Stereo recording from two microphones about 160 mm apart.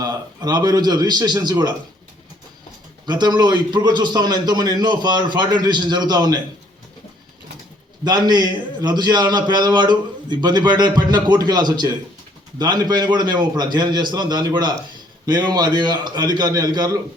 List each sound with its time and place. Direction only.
0.0 s a man's voice: 25° right (ahead or behind)
3.1 s a man's voice: 25° right (ahead or behind)
8.0 s a man's voice: 25° right (ahead or behind)